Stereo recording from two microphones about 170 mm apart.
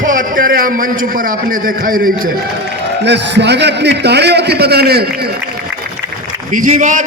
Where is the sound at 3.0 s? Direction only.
90° right; by 5.0 s 70° right (ahead or behind).